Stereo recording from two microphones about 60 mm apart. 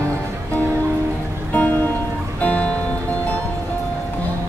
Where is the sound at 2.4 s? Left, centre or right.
Left.